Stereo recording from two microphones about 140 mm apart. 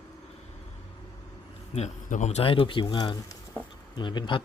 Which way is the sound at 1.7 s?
60° left (ahead or behind).